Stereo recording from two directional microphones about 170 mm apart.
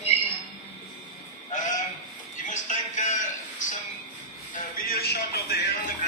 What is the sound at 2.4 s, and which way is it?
Music, 50° left (ahead or behind).